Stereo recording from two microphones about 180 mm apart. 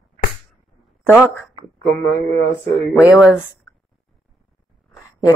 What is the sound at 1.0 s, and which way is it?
Speech, 10° right (ahead or behind).